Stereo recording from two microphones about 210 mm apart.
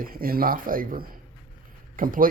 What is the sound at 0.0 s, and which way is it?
Speech, 45° right (ahead or behind).